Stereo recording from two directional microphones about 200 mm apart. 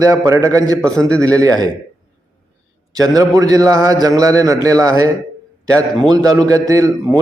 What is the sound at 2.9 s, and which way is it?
A man's voice, 20° right (ahead or behind).